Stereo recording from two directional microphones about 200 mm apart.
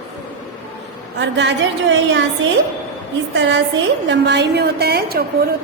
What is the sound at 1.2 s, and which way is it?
A woman's voice, 65° right (ahead or behind).